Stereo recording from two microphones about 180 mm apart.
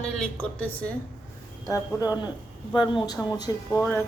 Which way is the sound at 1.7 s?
20° left (ahead or behind).